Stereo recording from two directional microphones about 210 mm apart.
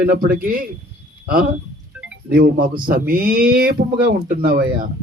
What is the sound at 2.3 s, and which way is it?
Speech, 45° right (ahead or behind).